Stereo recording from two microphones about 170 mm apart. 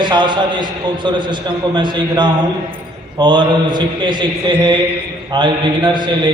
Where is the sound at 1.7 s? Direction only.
25° right (ahead or behind).